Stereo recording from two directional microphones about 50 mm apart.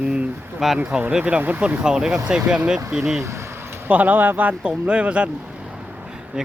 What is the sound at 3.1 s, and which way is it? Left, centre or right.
Speech, right.